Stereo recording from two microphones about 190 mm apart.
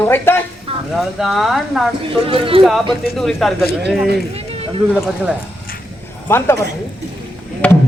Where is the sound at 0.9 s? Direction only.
Centre (ahead or behind).